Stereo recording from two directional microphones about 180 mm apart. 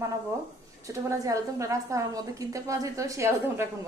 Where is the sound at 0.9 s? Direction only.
20° right (ahead or behind).